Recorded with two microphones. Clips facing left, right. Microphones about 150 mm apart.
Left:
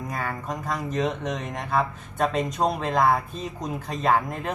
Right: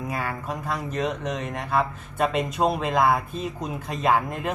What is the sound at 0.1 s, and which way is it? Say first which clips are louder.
Speech: left 1 dB; 5° right (ahead or behind).